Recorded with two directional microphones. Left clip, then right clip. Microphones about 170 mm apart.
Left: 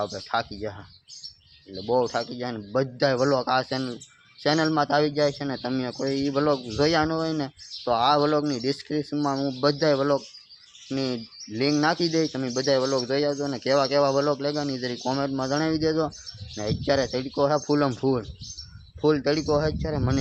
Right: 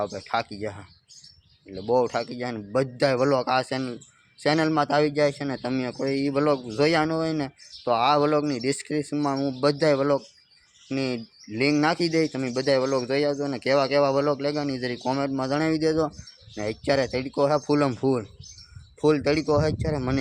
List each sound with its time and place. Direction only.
0.0 s speech: 15° right (ahead or behind)